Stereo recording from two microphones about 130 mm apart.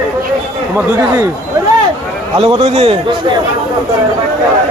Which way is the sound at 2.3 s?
45° right (ahead or behind).